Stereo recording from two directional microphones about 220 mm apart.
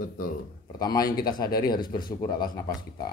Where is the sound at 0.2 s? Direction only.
40° left (ahead or behind).